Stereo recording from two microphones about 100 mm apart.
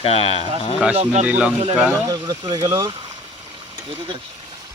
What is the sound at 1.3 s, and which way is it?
Speech, 15° right (ahead or behind).